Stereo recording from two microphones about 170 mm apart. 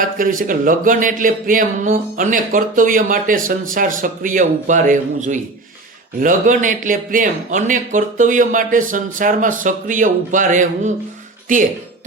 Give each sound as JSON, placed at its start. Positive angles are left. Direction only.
{"t": 0.0, "sound": "speech", "side_deg": -50}